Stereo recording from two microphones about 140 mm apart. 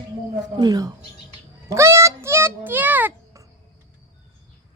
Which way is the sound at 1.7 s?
20° right (ahead or behind).